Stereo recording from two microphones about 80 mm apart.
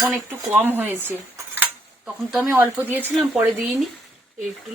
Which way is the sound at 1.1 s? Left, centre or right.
Right.